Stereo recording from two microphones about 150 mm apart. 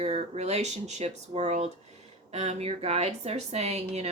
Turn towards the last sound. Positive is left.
turn(degrees=-45)  # may be behind; listen again after turning